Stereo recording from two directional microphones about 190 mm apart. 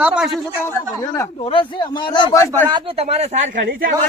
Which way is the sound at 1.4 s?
25° left (ahead or behind).